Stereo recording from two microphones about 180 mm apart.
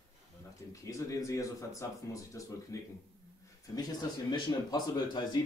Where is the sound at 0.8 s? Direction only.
20° left (ahead or behind).